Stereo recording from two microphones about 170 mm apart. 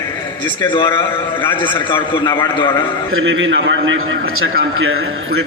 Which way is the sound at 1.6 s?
30° left (ahead or behind).